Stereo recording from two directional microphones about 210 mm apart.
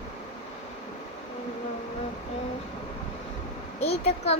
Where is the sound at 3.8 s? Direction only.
30° left (ahead or behind).